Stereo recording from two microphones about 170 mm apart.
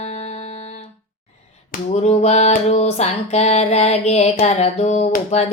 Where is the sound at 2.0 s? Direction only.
40° left (ahead or behind).